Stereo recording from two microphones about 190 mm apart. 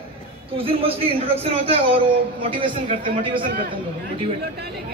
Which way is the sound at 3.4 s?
50° right (ahead or behind).